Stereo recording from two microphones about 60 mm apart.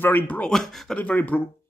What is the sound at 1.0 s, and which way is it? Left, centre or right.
Speech, left.